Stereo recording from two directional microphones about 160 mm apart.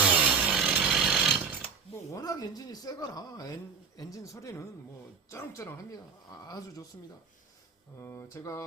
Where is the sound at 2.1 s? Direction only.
25° left (ahead or behind).